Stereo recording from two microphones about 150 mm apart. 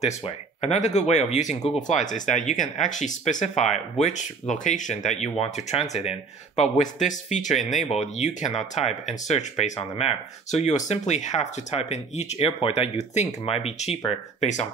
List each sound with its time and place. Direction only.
0.6 s speech: 50° left (ahead or behind)